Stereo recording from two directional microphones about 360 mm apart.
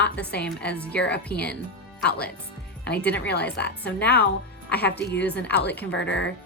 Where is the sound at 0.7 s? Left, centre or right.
Centre.